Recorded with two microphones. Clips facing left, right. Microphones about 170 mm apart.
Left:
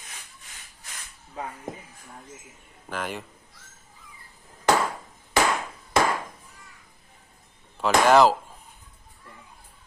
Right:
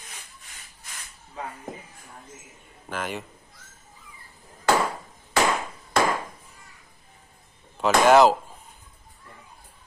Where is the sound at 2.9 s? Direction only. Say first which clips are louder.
Right 1 dB; centre (ahead or behind).